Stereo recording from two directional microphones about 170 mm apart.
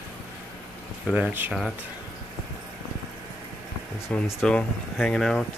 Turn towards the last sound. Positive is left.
turn(degrees=0)  # may be behind; listen again after turning